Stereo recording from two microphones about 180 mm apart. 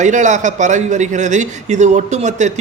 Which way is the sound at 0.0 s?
40° right (ahead or behind).